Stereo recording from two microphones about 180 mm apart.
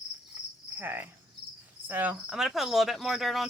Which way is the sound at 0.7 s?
10° right (ahead or behind).